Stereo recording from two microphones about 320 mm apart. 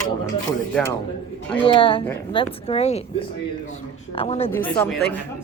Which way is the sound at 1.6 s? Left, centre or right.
Centre.